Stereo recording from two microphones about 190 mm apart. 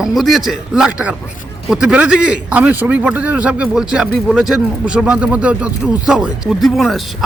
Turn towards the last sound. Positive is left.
turn(degrees=0)  # may be behind; listen again after turning